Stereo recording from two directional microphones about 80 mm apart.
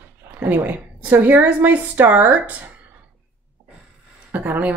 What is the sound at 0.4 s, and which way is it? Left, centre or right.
Speech, right.